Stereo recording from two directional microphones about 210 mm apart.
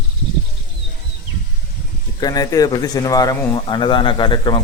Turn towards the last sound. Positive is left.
turn(degrees=20)  # may be behind; listen again after turning